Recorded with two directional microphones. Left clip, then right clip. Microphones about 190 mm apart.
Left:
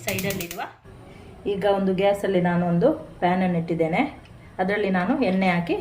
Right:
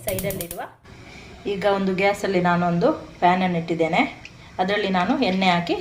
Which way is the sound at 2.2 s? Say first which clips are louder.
Right 3 dB; 20° left (ahead or behind).